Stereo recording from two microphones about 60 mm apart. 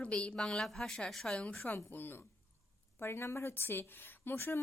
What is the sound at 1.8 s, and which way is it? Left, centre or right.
A woman's voice, left.